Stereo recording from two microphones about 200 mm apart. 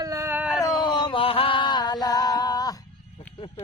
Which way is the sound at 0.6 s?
20° left (ahead or behind).